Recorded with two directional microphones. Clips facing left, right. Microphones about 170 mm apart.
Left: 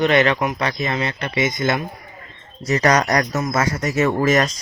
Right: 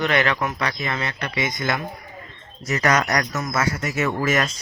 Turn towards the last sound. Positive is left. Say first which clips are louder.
# left 5 dB
turn(degrees=40)  # may be behind; listen again after turning